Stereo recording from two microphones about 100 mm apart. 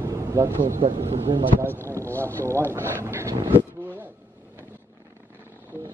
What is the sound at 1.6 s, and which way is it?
Speech, 20° left (ahead or behind).